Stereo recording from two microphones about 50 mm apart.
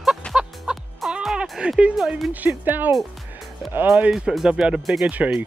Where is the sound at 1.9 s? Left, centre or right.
Centre.